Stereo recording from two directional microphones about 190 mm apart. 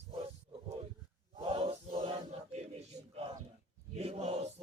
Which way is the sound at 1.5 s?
30° right (ahead or behind).